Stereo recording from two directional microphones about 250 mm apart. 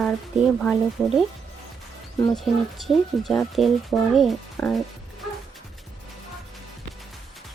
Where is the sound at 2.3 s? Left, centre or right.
Centre.